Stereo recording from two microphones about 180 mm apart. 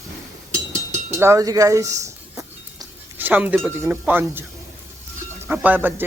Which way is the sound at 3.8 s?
10° right (ahead or behind).